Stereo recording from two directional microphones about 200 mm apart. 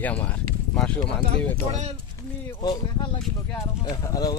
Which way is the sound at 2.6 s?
20° left (ahead or behind).